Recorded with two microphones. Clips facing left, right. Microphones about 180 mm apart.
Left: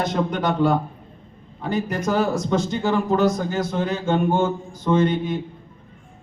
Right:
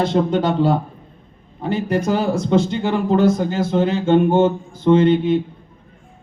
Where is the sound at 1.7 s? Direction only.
30° right (ahead or behind).